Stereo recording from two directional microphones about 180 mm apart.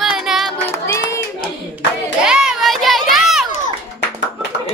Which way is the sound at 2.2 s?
5° right (ahead or behind).